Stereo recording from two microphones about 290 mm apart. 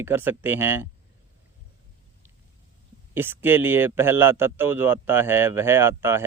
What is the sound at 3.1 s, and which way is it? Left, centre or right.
Speech, centre.